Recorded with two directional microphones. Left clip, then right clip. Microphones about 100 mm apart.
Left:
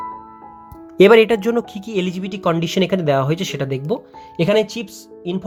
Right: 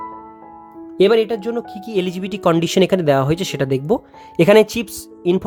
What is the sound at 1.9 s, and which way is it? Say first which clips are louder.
Speech: right 2 dB; 15° right (ahead or behind).